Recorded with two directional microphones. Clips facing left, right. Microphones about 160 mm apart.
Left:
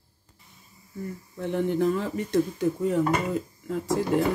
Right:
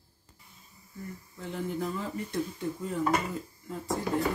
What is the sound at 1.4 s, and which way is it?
Speech, 65° left (ahead or behind).